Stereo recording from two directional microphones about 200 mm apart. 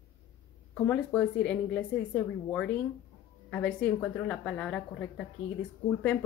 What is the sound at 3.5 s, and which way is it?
A woman's voice, 5° left (ahead or behind).